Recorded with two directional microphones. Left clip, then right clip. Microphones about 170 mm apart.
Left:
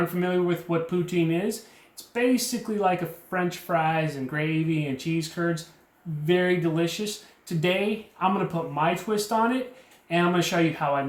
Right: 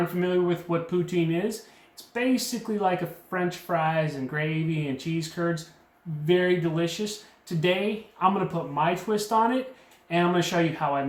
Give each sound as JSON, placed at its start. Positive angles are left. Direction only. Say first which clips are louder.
{"t": 0.2, "sound": "speech", "louder": "right 3 dB", "side_deg": 20}